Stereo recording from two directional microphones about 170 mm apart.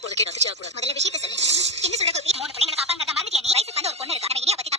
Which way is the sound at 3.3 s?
40° right (ahead or behind).